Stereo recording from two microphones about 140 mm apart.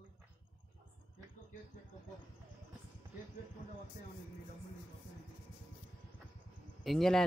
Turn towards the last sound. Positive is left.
turn(degrees=5)  # may be behind; listen again after turning